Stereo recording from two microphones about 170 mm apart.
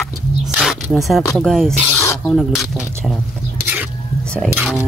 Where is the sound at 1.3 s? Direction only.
Centre (ahead or behind).